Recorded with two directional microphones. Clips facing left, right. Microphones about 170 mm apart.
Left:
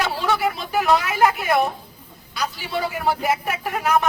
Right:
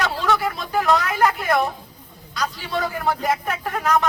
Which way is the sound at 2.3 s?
10° left (ahead or behind).